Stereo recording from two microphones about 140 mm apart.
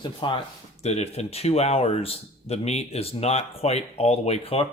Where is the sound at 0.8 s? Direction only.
50° left (ahead or behind).